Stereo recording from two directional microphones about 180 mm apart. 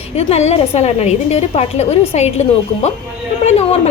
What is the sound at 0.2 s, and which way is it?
A woman's voice, 35° left (ahead or behind).